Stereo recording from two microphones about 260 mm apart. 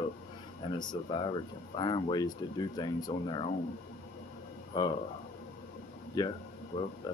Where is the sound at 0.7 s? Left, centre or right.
Centre.